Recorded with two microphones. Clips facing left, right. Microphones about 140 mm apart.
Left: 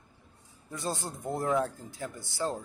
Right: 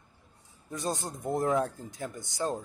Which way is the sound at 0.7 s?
20° right (ahead or behind).